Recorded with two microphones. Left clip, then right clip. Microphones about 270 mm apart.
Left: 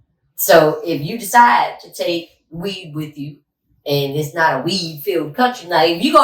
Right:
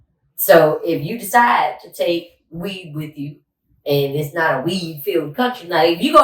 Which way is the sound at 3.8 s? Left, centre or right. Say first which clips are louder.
Right 1 dB; centre.